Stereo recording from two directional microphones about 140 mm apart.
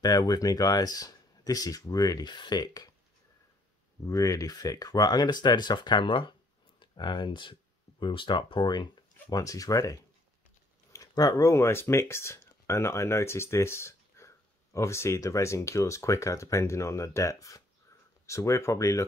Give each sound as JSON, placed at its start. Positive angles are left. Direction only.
{"t": 0.0, "sound": "speech", "side_deg": 25}
{"t": 4.0, "sound": "speech", "side_deg": 25}